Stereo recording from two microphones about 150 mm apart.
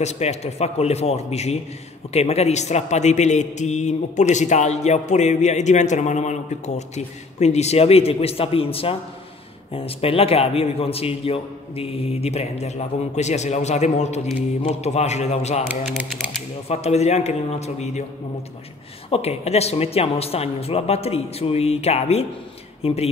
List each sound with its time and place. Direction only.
0.0 s a man's voice: 45° left (ahead or behind)
16.0 s speech: 5° right (ahead or behind)
16.6 s a man's voice: 45° left (ahead or behind)
19.0 s a man's voice: 40° left (ahead or behind)